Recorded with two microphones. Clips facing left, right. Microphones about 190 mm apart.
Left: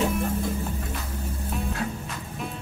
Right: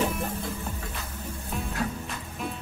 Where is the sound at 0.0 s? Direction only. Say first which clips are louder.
Left 3 dB; centre (ahead or behind).